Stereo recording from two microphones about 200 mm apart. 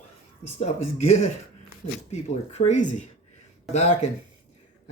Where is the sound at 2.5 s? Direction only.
35° left (ahead or behind).